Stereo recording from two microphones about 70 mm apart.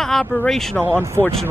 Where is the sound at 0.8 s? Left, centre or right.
Right.